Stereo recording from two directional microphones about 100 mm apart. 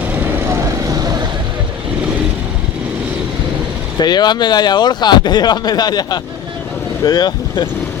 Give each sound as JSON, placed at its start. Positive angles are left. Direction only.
{"t": 0.5, "sound": "vehicle", "side_deg": -35}
{"t": 3.9, "sound": "speech", "side_deg": 45}